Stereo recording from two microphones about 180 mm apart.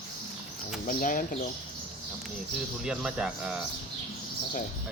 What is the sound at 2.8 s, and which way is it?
Speech, 5° right (ahead or behind).